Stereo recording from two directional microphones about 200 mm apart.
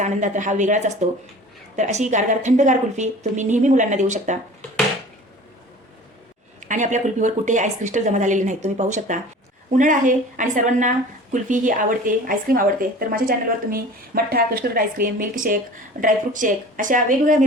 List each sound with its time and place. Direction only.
0.0 s a woman's voice: 40° right (ahead or behind)
6.6 s a woman's voice: 40° right (ahead or behind)